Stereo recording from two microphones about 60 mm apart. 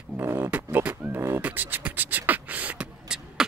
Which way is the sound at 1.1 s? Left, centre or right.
Right.